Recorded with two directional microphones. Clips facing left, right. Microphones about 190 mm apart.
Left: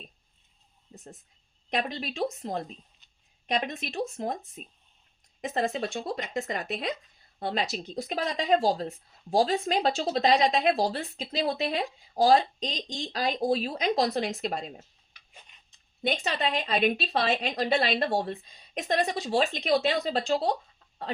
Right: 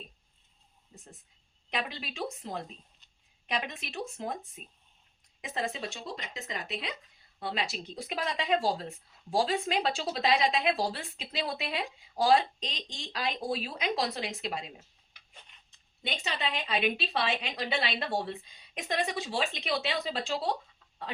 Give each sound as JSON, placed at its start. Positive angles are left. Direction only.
{"t": 0.9, "sound": "a woman's voice", "side_deg": 45}
{"t": 5.4, "sound": "a woman's voice", "side_deg": 45}
{"t": 16.0, "sound": "a woman's voice", "side_deg": 45}